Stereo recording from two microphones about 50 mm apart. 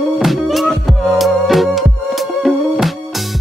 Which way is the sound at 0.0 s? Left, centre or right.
Centre.